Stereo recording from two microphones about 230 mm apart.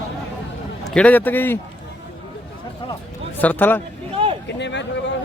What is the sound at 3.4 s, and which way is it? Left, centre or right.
Speech, centre.